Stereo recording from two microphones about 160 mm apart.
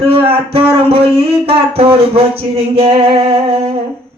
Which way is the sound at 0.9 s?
35° right (ahead or behind).